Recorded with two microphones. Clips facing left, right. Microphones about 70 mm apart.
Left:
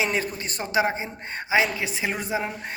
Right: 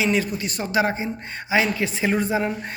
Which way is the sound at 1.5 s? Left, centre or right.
Centre.